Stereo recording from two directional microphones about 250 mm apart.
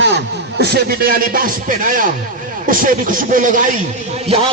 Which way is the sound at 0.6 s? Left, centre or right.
Right.